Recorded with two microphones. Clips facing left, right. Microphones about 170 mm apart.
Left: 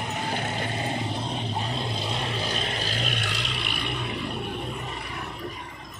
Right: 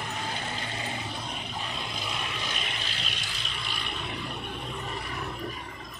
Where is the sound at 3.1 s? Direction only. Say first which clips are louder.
Left 8 dB; 70° left (ahead or behind).